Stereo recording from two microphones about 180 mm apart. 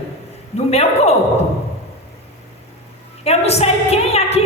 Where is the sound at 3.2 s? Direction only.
35° left (ahead or behind).